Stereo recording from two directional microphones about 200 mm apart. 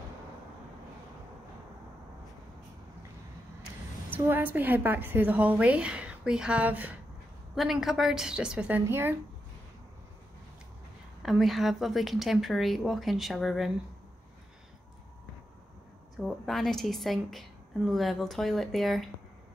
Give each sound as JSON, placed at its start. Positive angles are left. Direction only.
{"t": 4.1, "sound": "a woman's voice", "side_deg": -10}
{"t": 11.2, "sound": "a woman's voice", "side_deg": 0}
{"t": 16.2, "sound": "a woman's voice", "side_deg": 0}